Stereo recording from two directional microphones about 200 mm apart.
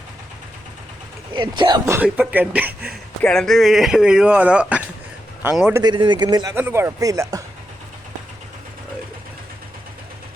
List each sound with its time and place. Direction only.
1.3 s speech: 20° right (ahead or behind)
2.0 s speech: 10° right (ahead or behind)
3.2 s speech: 5° left (ahead or behind)
5.8 s speech: 20° right (ahead or behind)